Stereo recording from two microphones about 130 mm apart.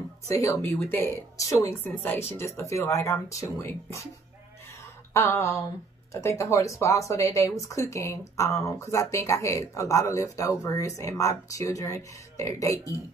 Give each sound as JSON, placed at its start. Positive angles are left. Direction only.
{"t": 0.3, "sound": "speech", "side_deg": 25}
{"t": 5.1, "sound": "speech", "side_deg": 20}